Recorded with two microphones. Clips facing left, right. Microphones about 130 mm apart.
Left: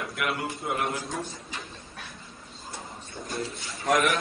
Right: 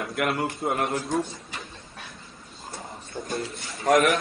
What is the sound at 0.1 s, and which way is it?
Speech, 50° right (ahead or behind).